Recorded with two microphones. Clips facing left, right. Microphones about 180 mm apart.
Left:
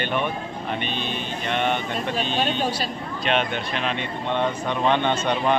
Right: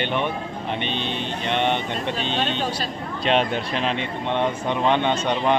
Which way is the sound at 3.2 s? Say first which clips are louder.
Right 3 dB; 30° right (ahead or behind).